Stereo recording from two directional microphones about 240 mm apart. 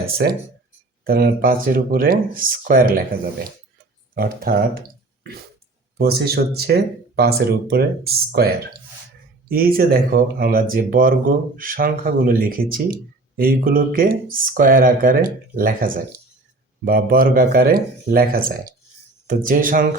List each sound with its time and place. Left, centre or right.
0.0 s speech: right
4.1 s speech: right
6.0 s speech: right